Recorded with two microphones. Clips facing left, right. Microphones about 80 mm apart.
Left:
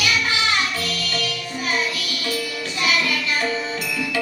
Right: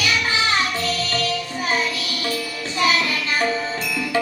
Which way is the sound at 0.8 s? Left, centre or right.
Right.